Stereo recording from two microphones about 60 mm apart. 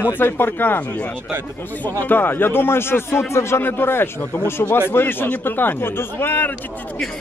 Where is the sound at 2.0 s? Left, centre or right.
Left.